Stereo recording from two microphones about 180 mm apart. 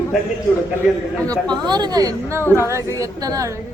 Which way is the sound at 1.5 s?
25° right (ahead or behind).